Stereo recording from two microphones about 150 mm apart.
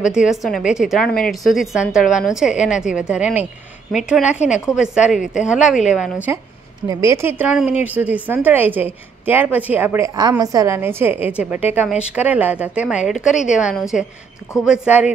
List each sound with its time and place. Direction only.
0.1 s a woman's voice: 5° right (ahead or behind)
6.9 s a woman's voice: 20° right (ahead or behind)